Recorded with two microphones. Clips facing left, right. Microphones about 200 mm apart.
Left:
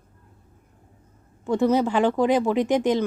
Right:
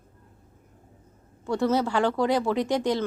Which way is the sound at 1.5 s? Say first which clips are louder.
Left 4 dB; 15° left (ahead or behind).